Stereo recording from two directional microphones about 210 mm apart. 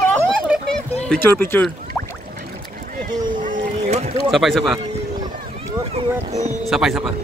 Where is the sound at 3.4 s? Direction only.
30° right (ahead or behind).